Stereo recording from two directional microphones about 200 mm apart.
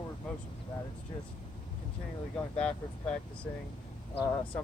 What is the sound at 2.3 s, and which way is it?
Speech, 5° left (ahead or behind).